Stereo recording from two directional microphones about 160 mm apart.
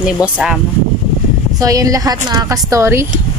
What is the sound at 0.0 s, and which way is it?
Speech, 5° right (ahead or behind).